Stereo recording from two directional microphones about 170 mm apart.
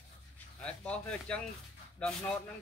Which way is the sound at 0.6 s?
5° left (ahead or behind).